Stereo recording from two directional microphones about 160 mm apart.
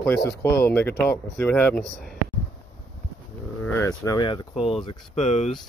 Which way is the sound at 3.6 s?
10° left (ahead or behind).